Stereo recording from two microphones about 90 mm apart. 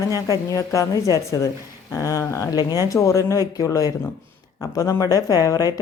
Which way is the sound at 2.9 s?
35° left (ahead or behind).